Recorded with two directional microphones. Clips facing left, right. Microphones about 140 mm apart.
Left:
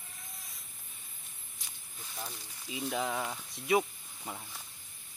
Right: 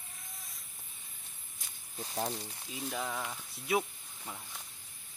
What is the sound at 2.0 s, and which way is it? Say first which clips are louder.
Speech: right 8 dB; 40° right (ahead or behind).